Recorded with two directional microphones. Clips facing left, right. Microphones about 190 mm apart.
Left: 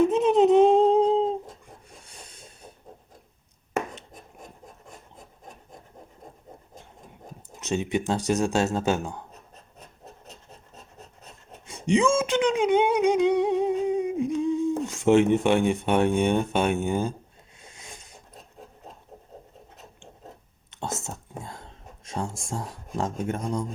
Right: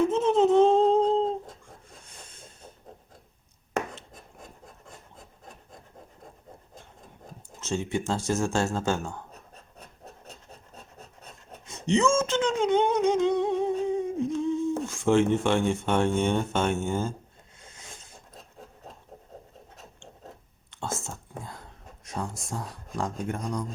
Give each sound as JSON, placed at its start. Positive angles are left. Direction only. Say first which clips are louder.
{"t": 0.1, "sound": "humming", "louder": "left 3 dB", "side_deg": 15}
{"t": 2.4, "sound": "hiss", "louder": "left 1 dB", "side_deg": 10}
{"t": 7.6, "sound": "speech", "louder": "left 3 dB", "side_deg": 20}
{"t": 11.6, "sound": "a sound", "louder": "left 2 dB", "side_deg": 10}
{"t": 20.7, "sound": "whispering", "louder": "left 1 dB", "side_deg": 20}
{"t": 23.0, "sound": "speech", "louder": "left 3 dB", "side_deg": 25}